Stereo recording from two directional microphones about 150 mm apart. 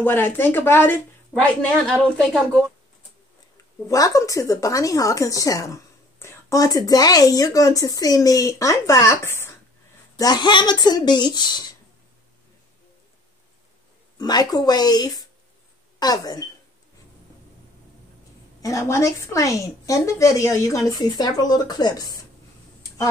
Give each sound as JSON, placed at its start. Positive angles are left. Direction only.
{"t": 0.0, "sound": "speech", "side_deg": 15}
{"t": 3.5, "sound": "speech", "side_deg": 20}
{"t": 14.1, "sound": "speech", "side_deg": 25}
{"t": 18.6, "sound": "speech", "side_deg": 20}